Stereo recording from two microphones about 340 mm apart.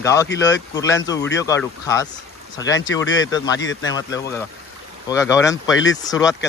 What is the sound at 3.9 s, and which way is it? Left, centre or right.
Speech, centre.